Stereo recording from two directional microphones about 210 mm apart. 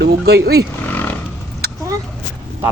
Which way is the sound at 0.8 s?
10° left (ahead or behind).